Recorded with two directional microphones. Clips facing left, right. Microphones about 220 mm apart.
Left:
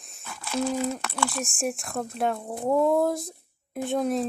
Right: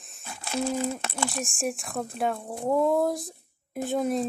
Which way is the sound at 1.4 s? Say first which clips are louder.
Left 1 dB; centre (ahead or behind).